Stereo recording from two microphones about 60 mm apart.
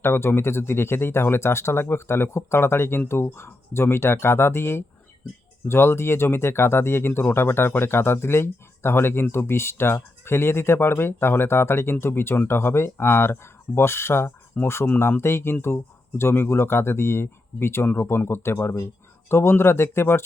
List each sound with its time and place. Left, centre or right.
0.0 s speech: left
14.8 s speech: left